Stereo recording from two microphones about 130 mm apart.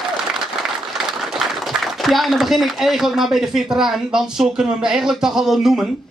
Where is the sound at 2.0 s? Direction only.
Centre (ahead or behind).